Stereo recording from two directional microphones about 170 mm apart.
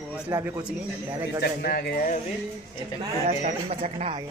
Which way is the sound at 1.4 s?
65° left (ahead or behind).